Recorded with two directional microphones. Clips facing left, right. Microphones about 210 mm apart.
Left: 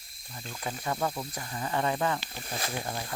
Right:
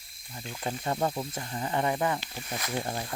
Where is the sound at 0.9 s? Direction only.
25° right (ahead or behind).